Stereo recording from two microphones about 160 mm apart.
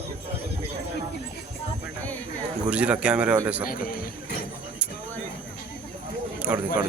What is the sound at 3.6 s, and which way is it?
Speech, 65° left (ahead or behind).